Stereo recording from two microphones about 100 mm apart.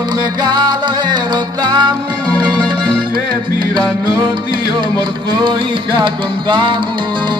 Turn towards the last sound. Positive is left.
turn(degrees=-55)  # may be behind; listen again after turning